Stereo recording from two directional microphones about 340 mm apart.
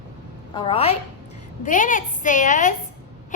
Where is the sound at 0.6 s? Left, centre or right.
Centre.